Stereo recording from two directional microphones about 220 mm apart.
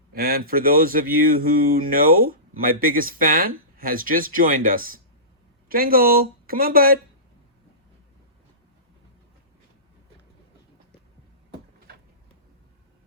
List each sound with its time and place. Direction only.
0.1 s speech: 45° right (ahead or behind)